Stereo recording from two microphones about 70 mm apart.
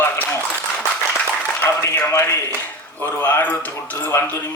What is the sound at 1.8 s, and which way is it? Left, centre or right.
Speech, left.